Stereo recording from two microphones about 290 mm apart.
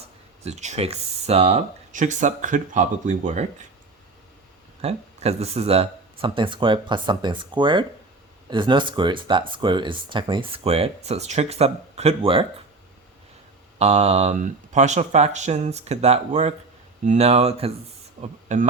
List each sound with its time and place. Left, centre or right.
0.0 s speech: right
4.8 s speech: right
13.7 s speech: right